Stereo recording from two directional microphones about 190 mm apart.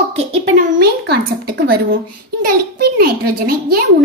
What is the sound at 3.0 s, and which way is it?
Speech, 50° right (ahead or behind).